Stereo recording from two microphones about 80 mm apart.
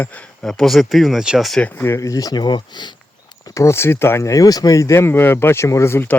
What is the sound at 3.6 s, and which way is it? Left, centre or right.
Speech, left.